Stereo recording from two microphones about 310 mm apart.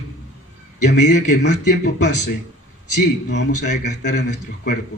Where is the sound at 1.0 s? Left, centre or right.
Left.